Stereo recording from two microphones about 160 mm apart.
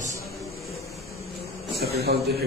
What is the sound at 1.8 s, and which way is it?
Speech, 85° right.